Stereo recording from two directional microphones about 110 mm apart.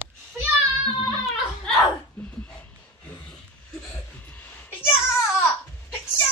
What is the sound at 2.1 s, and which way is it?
Dog, 10° left (ahead or behind).